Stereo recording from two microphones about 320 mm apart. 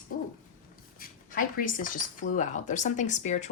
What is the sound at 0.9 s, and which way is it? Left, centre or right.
A woman's voice, left.